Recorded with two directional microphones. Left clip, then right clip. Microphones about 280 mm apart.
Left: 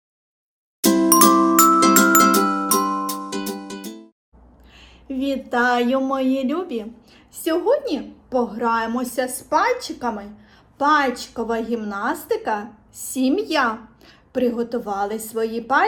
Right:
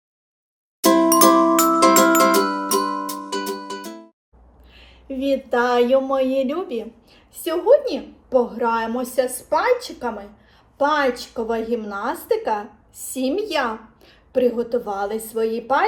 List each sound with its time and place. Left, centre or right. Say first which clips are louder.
1.5 s music: left 1 dB; centre
4.7 s a woman's voice: left 1 dB; centre